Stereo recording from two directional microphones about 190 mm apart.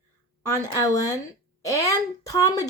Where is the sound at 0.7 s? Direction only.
15° left (ahead or behind).